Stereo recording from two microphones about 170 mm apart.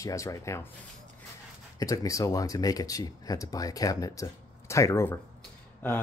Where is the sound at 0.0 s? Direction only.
20° left (ahead or behind).